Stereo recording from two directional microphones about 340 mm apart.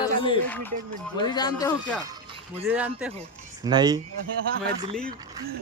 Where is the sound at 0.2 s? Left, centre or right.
Centre.